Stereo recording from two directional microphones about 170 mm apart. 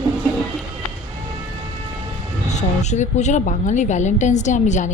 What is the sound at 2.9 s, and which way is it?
A woman's voice, 45° left (ahead or behind).